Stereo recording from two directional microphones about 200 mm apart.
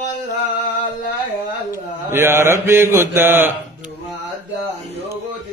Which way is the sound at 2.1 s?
10° right (ahead or behind).